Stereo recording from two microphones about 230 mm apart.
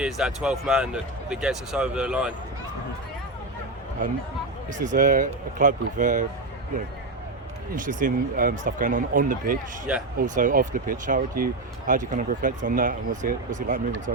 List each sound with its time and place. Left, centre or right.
0.0 s speech: centre
4.8 s speech: right
7.8 s speech: right